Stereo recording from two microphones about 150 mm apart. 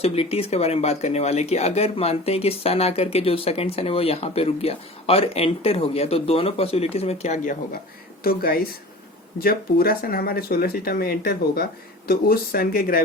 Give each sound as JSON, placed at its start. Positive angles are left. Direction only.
{"t": 0.0, "sound": "speech", "side_deg": 40}
{"t": 8.2, "sound": "speech", "side_deg": 90}